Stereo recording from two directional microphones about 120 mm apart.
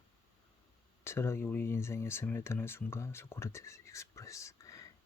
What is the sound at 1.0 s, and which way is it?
Speech, 20° left (ahead or behind).